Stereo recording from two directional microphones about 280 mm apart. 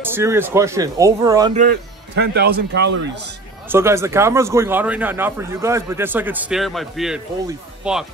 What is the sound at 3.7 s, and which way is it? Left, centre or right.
A man's voice, centre.